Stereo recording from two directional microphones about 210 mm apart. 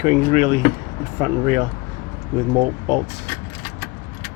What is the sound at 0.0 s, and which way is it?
Speech, 35° right (ahead or behind).